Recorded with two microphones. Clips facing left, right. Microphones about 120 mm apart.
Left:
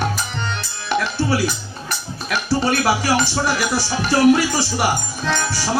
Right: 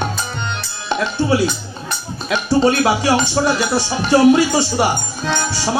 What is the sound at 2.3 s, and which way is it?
Speech, 20° right (ahead or behind).